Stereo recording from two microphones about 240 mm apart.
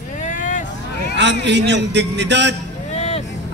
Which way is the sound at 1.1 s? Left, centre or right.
Right.